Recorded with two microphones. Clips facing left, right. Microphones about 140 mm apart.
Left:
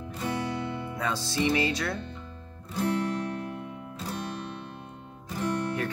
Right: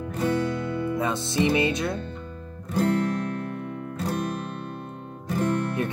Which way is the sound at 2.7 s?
55° right (ahead or behind).